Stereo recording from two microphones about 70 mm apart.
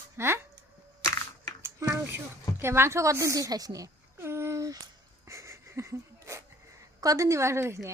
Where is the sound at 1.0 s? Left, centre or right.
Left.